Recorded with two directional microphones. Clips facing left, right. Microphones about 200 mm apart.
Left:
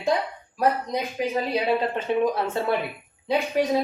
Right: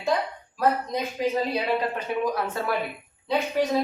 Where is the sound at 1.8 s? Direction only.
25° left (ahead or behind).